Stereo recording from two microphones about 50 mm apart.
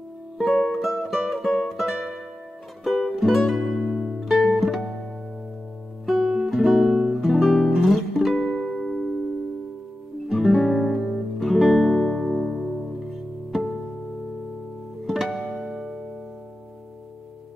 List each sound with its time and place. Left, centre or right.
0.5 s music: centre
1.9 s music: right
2.8 s music: centre
6.0 s guitar: centre
7.2 s music: centre
8.5 s music: centre
12.0 s music: centre
15.0 s music: centre